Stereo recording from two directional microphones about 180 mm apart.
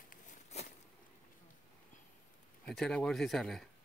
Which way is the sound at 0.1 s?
40° left (ahead or behind).